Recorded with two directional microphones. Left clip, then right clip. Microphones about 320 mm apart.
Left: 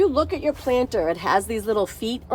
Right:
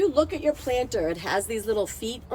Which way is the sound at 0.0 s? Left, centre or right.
Centre.